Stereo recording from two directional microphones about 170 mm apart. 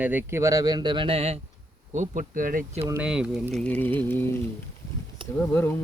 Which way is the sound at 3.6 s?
10° left (ahead or behind).